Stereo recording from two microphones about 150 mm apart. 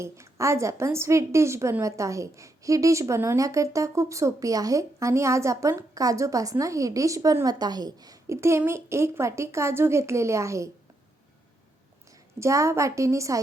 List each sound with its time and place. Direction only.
0.0 s a woman's voice: 20° right (ahead or behind)
12.4 s a woman's voice: 20° right (ahead or behind)